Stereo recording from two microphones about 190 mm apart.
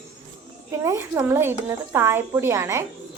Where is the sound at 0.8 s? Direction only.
15° right (ahead or behind).